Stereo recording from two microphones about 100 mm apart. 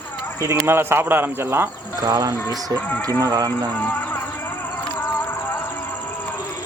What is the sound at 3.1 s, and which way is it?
Speech, 40° right (ahead or behind).